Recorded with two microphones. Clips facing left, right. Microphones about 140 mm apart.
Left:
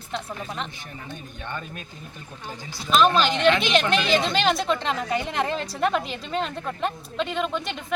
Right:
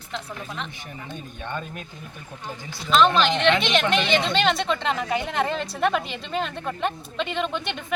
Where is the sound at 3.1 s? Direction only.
5° left (ahead or behind).